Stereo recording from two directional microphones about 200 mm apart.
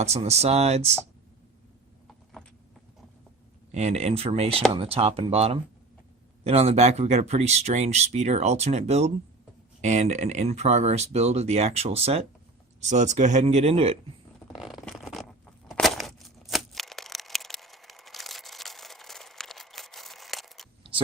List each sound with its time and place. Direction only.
0.0 s speech: 30° right (ahead or behind)
2.4 s clip-clop: 5° left (ahead or behind)
3.7 s speech: 35° right (ahead or behind)
14.6 s a sound: centre (ahead or behind)